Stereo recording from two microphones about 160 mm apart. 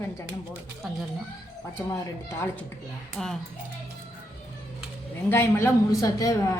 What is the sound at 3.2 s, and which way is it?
Speech, 5° left (ahead or behind).